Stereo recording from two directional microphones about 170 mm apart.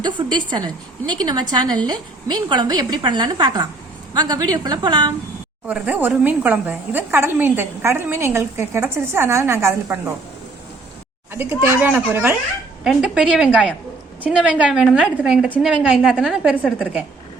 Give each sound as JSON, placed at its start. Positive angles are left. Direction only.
{"t": 0.0, "sound": "a woman's voice", "side_deg": -25}
{"t": 5.6, "sound": "a woman's voice", "side_deg": -10}
{"t": 11.3, "sound": "a woman's voice", "side_deg": -15}